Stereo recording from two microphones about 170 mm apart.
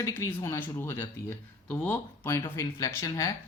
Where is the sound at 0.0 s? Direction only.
15° left (ahead or behind).